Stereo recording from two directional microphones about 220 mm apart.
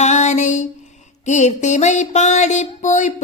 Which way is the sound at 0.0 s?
30° left (ahead or behind).